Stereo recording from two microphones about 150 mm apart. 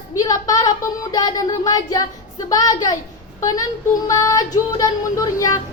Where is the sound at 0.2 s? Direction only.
25° left (ahead or behind).